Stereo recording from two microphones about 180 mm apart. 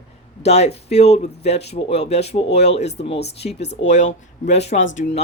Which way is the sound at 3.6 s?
75° left (ahead or behind).